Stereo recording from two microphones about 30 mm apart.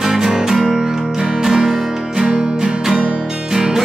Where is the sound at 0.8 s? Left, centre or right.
Centre.